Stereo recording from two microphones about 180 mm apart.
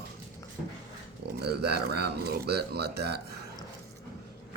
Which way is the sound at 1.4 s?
65° right (ahead or behind).